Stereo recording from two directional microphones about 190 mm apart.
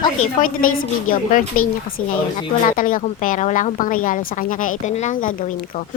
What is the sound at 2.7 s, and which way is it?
A woman's voice, 45° left (ahead or behind).